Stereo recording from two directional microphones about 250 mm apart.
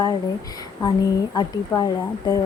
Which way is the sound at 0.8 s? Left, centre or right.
Centre.